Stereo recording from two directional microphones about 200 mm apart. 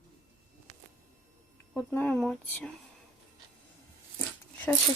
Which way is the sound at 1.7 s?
10° left (ahead or behind).